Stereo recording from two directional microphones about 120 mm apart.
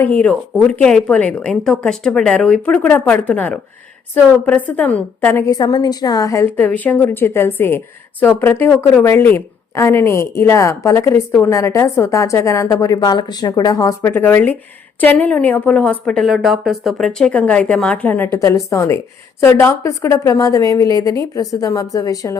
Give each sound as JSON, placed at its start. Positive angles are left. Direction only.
{"t": 0.0, "sound": "a woman's voice", "side_deg": 15}
{"t": 5.5, "sound": "a woman's voice", "side_deg": 35}